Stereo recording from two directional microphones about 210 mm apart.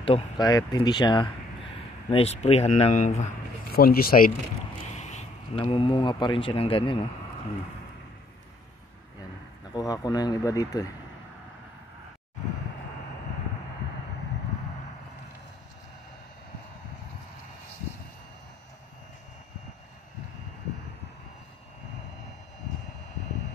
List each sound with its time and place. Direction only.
0.0 s speech: 20° left (ahead or behind); by 4.3 s 45° left (ahead or behind)
4.9 s speech: 35° left (ahead or behind)
9.7 s speech: 20° left (ahead or behind)